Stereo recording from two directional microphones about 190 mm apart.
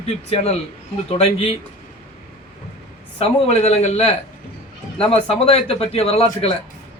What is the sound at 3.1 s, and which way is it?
A man's voice, 35° left (ahead or behind).